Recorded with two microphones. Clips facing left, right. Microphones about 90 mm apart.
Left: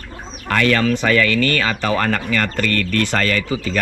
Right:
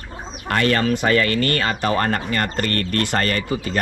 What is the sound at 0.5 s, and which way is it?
Speech, 40° right (ahead or behind).